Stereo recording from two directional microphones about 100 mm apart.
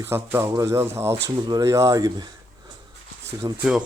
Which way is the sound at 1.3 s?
45° right (ahead or behind).